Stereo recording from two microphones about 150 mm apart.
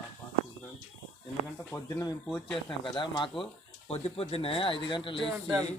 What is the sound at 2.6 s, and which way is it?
Speech, 30° left (ahead or behind).